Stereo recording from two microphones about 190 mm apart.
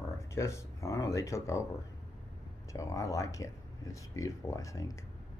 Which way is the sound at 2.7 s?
15° left (ahead or behind).